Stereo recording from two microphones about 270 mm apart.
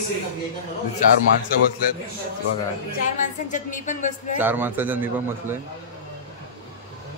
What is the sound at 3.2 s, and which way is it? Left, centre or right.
Speech, left.